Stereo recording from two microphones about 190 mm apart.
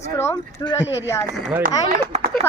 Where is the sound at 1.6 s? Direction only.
45° right (ahead or behind).